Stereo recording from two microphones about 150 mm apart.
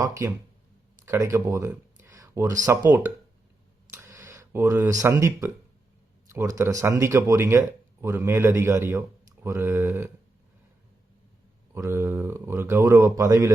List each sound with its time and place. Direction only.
0.0 s speech: 20° right (ahead or behind)
3.9 s a sound: 20° right (ahead or behind)
6.2 s speech: 20° right (ahead or behind)
11.7 s speech: 15° right (ahead or behind)